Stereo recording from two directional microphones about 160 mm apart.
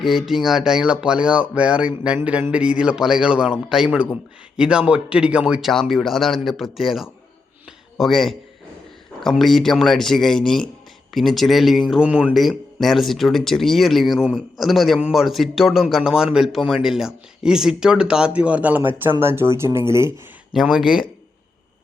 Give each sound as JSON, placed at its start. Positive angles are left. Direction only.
{"t": 0.0, "sound": "speech", "side_deg": 0}
{"t": 20.5, "sound": "speech", "side_deg": 0}